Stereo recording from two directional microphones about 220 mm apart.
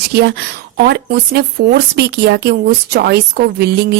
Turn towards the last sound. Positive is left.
turn(degrees=-50)  # may be behind; listen again after turning